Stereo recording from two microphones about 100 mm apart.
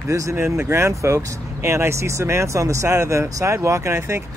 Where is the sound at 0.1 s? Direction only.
30° right (ahead or behind).